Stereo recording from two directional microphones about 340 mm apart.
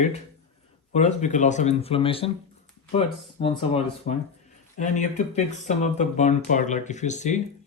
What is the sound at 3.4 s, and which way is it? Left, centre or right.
Speech, centre.